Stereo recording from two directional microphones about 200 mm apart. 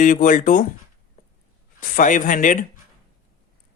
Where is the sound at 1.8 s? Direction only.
40° left (ahead or behind).